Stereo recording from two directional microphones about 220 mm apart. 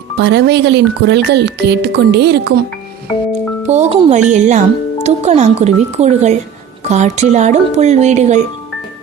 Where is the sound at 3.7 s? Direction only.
30° right (ahead or behind).